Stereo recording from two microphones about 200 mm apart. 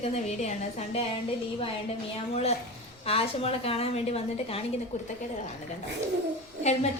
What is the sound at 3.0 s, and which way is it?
A woman's voice, 30° left (ahead or behind).